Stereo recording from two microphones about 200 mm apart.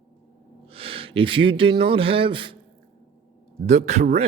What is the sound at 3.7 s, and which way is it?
Speech, 35° right (ahead or behind).